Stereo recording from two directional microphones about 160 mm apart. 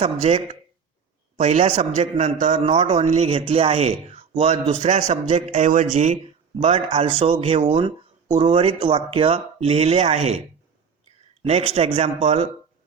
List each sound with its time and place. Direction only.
0.0 s a man's voice: 40° right (ahead or behind)
11.4 s speech: 40° right (ahead or behind)